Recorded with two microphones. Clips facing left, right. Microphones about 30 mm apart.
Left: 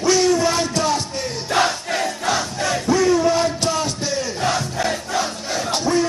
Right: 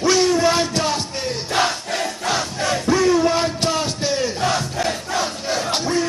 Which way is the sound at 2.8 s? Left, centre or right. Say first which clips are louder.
Even; centre.